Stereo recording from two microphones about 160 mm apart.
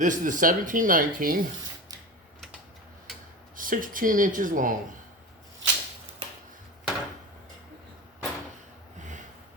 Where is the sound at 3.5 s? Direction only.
60° right (ahead or behind).